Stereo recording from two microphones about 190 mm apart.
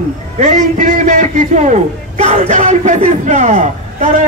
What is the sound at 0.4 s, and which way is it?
A man's voice, 45° right (ahead or behind).